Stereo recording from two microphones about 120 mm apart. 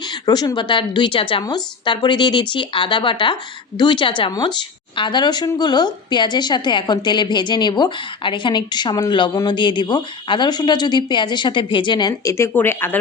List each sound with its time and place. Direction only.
0.1 s a woman's voice: 35° left (ahead or behind)
12.3 s speech: 20° left (ahead or behind)